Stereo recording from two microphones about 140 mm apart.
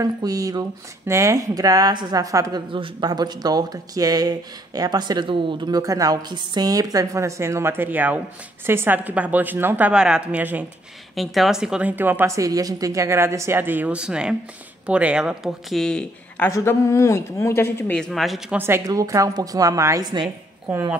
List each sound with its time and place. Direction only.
0.0 s speech: 25° right (ahead or behind)
2.7 s speech: 35° right (ahead or behind); by 10.7 s 10° right (ahead or behind)
11.1 s speech: centre (ahead or behind)
16.4 s speech: 20° left (ahead or behind)
17.9 s speech: 5° left (ahead or behind)
18.6 s speech: 20° right (ahead or behind)